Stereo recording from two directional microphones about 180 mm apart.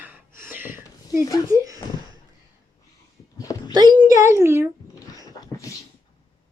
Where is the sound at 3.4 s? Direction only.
20° left (ahead or behind).